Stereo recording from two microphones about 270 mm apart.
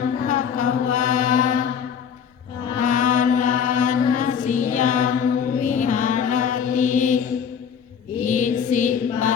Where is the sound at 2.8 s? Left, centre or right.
Left.